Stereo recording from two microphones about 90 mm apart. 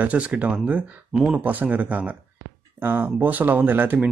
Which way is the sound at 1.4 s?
20° right (ahead or behind).